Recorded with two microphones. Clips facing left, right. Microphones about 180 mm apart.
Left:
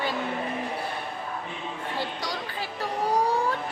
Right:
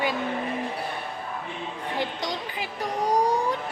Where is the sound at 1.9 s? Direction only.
20° right (ahead or behind).